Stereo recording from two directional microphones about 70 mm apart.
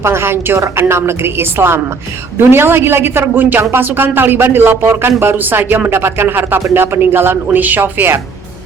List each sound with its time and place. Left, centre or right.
0.0 s speech: right